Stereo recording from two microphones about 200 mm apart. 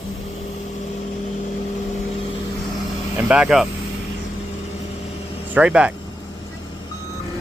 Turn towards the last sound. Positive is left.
turn(degrees=-5)  # may be behind; listen again after turning